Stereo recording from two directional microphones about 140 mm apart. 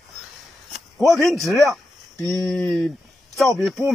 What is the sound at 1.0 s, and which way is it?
Speech, centre (ahead or behind).